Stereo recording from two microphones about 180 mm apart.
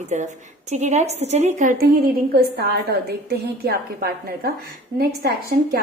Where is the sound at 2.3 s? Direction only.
60° right (ahead or behind).